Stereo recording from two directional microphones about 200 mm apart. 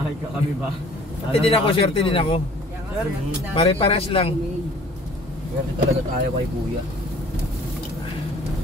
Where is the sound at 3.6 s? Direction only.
30° left (ahead or behind).